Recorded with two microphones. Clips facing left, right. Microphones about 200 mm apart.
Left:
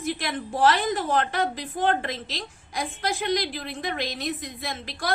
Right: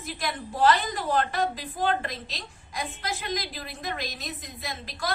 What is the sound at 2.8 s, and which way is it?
Speech, 50° left (ahead or behind).